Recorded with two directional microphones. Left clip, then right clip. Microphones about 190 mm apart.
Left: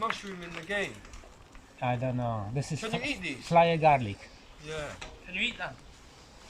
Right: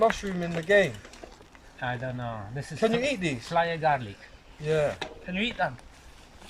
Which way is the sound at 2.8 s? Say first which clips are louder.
Right 9 dB; 55° right (ahead or behind).